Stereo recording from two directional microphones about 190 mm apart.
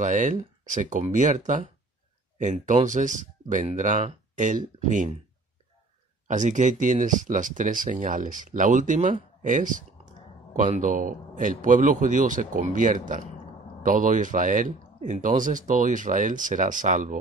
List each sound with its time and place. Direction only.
0.0 s speech: 40° right (ahead or behind)
6.2 s speech: 40° right (ahead or behind)